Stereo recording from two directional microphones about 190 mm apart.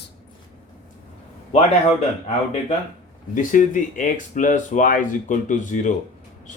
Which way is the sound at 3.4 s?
45° left (ahead or behind).